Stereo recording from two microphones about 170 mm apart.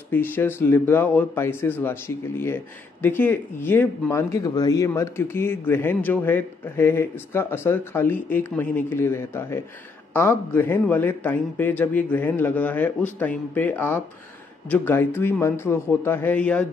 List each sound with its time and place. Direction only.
0.1 s speech: 10° left (ahead or behind)